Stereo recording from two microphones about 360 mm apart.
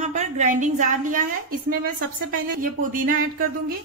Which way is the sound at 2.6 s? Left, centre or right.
Right.